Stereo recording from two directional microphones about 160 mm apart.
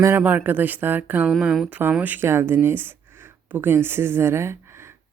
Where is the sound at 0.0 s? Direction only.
15° right (ahead or behind).